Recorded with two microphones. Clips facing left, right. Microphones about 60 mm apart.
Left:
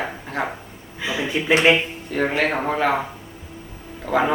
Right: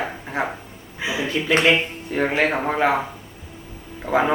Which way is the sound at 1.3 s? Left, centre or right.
Centre.